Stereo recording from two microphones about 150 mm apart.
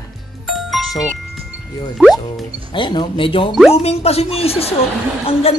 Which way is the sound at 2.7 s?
30° left (ahead or behind).